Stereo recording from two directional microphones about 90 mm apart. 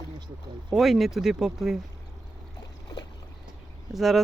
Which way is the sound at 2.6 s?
45° left (ahead or behind).